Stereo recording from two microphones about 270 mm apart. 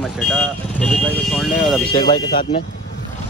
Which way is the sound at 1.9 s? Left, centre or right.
Centre.